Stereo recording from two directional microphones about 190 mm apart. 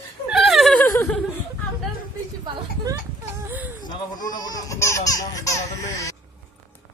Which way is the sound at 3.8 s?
20° left (ahead or behind).